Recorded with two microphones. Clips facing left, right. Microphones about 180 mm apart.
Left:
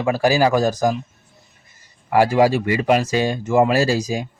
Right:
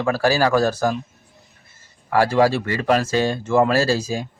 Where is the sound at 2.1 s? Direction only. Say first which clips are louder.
Left 2 dB; 15° left (ahead or behind).